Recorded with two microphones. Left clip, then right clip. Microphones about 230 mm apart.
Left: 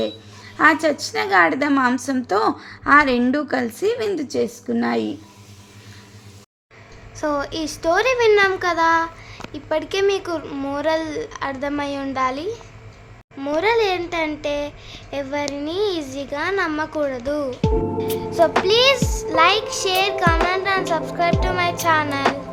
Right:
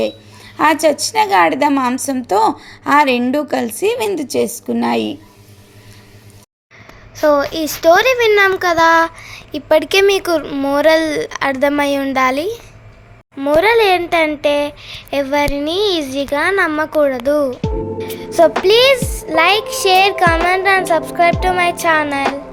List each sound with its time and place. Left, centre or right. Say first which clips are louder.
0.5 s a woman's voice: right 4 dB; centre
7.2 s a child's voice: right 10 dB; centre
18.2 s child singing: right 7 dB; right
18.6 s a child's voice: right 5 dB; right